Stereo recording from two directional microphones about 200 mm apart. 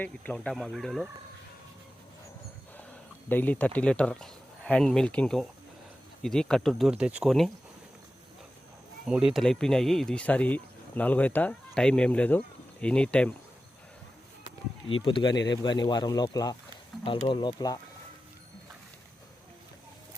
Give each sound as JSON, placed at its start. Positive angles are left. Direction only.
{"t": 0.0, "sound": "speech", "side_deg": 5}
{"t": 3.2, "sound": "speech", "side_deg": 10}
{"t": 9.0, "sound": "speech", "side_deg": -5}
{"t": 15.0, "sound": "speech", "side_deg": 25}